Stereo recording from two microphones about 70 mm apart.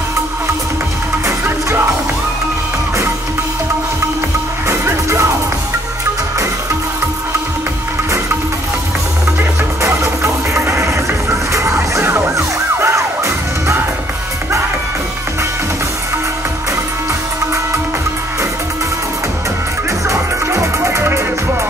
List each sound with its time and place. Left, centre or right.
4.6 s music: right
9.8 s music: right
20.1 s music: right